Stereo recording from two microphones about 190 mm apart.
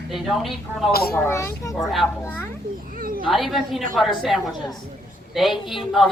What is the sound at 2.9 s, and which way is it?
Speech, 50° right (ahead or behind).